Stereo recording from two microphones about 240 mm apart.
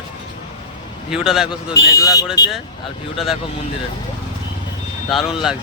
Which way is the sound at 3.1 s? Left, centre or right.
Centre.